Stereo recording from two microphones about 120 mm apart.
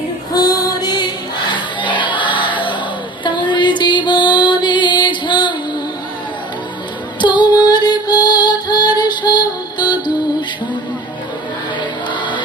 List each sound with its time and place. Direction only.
0.3 s music: 30° left (ahead or behind)
7.2 s music: 40° left (ahead or behind)